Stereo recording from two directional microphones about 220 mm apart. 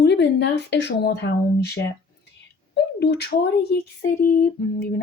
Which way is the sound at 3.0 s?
50° left (ahead or behind).